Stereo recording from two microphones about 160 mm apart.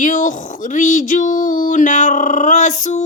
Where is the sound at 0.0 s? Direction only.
50° left (ahead or behind).